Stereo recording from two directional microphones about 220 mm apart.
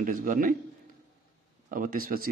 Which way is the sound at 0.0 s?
40° right (ahead or behind).